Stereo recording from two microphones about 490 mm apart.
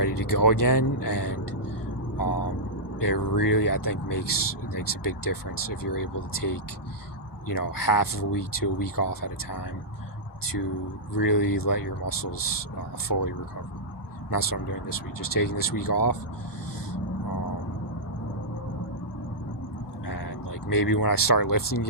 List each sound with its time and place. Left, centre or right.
0.0 s speech: left
2.1 s vehicle: left
3.0 s speech: left
11.1 s speech: left
14.3 s speech: left
20.1 s speech: left